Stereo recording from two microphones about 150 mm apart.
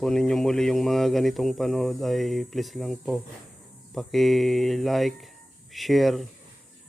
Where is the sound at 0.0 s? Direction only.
5° left (ahead or behind).